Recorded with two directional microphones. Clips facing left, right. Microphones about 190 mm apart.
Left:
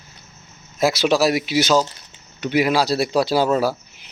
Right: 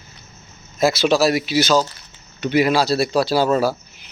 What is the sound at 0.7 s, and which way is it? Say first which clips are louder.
Speech: right 1 dB; 15° left (ahead or behind).